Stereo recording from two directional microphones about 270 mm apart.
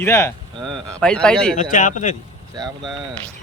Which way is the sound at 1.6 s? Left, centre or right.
Left.